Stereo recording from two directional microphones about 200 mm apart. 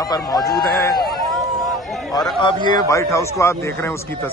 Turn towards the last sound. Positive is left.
turn(degrees=15)  # may be behind; listen again after turning